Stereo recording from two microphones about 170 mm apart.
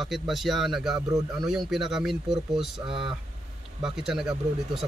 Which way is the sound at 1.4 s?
Centre (ahead or behind).